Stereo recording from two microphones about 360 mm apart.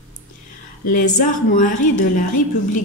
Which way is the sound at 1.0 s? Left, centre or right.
Left.